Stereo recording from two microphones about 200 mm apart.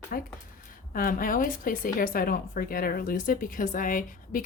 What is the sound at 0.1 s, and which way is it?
Speech, 45° left (ahead or behind).